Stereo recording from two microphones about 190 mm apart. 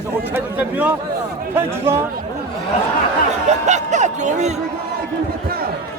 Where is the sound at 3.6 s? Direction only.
40° right (ahead or behind).